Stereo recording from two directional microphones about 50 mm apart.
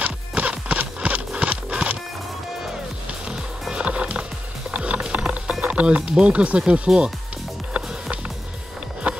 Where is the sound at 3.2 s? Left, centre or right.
Centre.